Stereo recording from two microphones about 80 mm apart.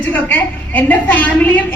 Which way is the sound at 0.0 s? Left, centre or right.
Left.